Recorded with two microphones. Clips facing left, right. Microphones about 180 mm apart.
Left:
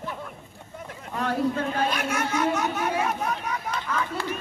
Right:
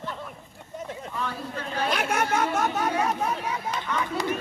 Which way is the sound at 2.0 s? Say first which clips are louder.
Right 1 dB; 60° right (ahead or behind).